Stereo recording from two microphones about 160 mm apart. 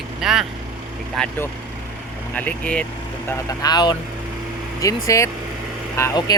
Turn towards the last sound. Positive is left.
turn(degrees=20)  # may be behind; listen again after turning